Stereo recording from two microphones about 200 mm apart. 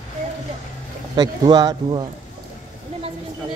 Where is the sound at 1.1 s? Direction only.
20° right (ahead or behind).